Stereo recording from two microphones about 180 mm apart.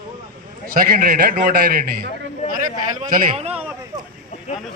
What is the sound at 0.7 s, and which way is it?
A man's voice, 55° right (ahead or behind).